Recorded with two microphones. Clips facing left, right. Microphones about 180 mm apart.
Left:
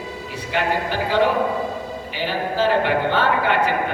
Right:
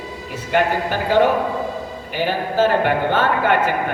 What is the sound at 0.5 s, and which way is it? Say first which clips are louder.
Speech: right 3 dB; 50° right (ahead or behind).